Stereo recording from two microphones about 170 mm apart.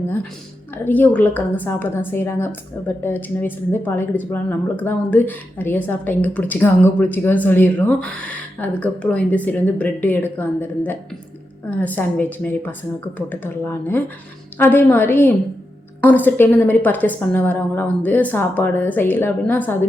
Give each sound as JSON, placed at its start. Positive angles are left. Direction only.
{"t": 0.9, "sound": "a woman's voice", "side_deg": 10}